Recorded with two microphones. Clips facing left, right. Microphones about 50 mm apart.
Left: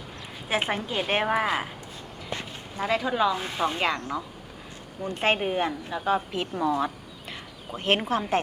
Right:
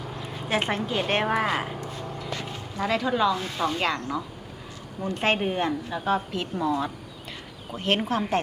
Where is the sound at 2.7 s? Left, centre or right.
Centre.